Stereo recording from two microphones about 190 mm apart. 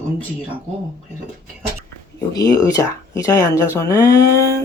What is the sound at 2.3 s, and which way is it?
Speech, 20° left (ahead or behind).